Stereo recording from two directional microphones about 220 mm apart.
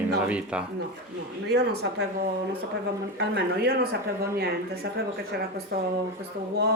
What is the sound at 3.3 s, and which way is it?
Speech, 50° right (ahead or behind).